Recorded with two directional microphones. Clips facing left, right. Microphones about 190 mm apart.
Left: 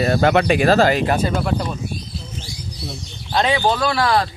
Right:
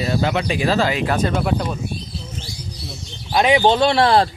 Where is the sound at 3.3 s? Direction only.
15° right (ahead or behind).